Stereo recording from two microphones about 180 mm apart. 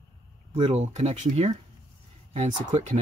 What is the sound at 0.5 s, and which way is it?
Speech, 35° right (ahead or behind).